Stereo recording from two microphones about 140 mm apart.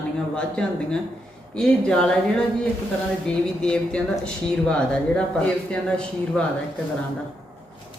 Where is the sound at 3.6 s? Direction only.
5° left (ahead or behind).